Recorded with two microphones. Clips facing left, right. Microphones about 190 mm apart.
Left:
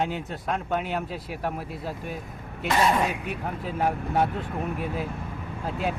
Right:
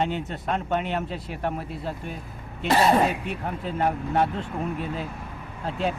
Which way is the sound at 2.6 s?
35° right (ahead or behind).